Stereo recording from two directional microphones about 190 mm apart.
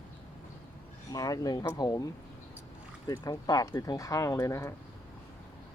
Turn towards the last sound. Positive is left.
turn(degrees=15)  # may be behind; listen again after turning